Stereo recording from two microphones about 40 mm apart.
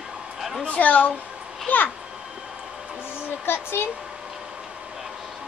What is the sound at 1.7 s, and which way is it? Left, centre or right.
Speech, left.